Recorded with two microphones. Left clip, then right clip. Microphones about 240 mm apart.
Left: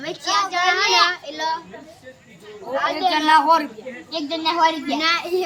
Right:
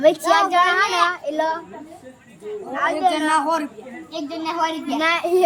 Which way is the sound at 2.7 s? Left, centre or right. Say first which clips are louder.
Even; centre.